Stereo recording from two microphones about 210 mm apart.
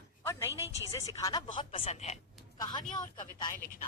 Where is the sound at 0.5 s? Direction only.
15° right (ahead or behind).